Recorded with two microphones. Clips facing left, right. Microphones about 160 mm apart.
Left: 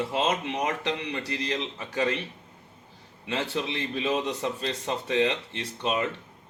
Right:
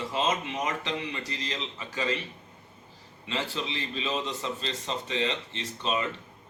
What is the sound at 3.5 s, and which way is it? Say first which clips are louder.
Speech: left 4 dB; 60° left (ahead or behind).